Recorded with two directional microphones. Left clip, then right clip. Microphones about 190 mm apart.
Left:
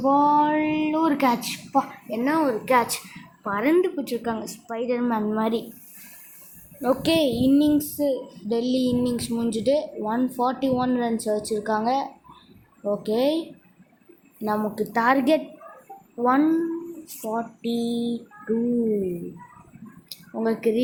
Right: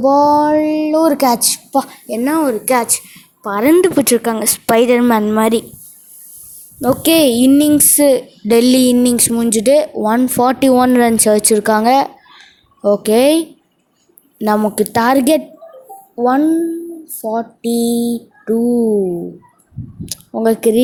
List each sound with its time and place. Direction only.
0.1 s mantra: 15° right (ahead or behind)
0.4 s speech: 40° right (ahead or behind)
3.4 s speech: 45° right (ahead or behind)
6.8 s speech: 55° right (ahead or behind)
16.2 s speech: 30° right (ahead or behind); by 18.2 s 50° right (ahead or behind)
20.3 s speech: 50° right (ahead or behind)